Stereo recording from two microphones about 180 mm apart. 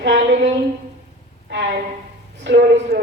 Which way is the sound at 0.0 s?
85° right.